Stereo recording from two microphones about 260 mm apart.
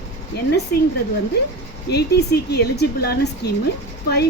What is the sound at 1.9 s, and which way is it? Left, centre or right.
Speech, left.